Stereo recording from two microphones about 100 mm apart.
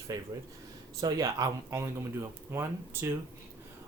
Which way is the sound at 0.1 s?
35° right (ahead or behind).